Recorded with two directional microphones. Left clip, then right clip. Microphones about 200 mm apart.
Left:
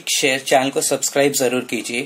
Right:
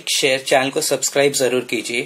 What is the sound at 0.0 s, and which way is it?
Speech, 5° left (ahead or behind).